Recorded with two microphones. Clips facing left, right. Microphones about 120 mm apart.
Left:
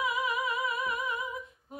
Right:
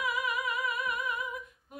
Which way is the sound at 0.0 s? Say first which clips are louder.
Left 2 dB; 30° left (ahead or behind).